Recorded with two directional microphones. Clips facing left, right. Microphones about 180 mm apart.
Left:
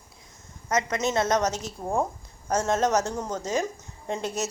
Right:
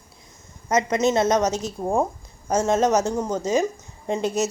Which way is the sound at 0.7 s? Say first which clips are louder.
Right 5 dB; 20° right (ahead or behind).